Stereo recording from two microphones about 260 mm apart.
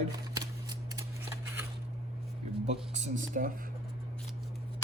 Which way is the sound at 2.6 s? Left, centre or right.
Right.